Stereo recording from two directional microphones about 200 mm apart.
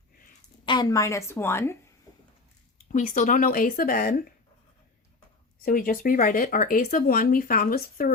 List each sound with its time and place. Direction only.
0.6 s a woman's voice: 20° left (ahead or behind)
2.9 s speech: 40° left (ahead or behind)
5.6 s speech: 45° left (ahead or behind)